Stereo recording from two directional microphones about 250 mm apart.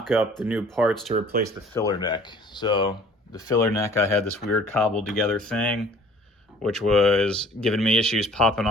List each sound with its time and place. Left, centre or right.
0.0 s speech: centre
1.1 s speech: right
1.7 s speech: centre